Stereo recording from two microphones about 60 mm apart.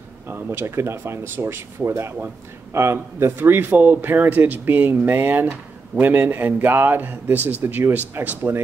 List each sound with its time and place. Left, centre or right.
0.3 s a man's voice: right